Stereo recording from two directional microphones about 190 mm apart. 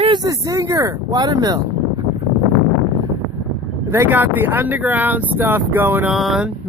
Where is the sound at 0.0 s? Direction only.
25° right (ahead or behind).